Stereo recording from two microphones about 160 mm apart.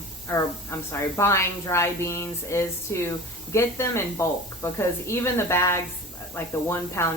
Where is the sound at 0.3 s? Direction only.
15° left (ahead or behind).